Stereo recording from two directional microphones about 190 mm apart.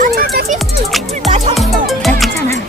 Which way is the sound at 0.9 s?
Centre (ahead or behind).